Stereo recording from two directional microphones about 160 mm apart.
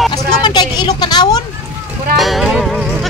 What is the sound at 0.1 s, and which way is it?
Vehicle, 25° left (ahead or behind).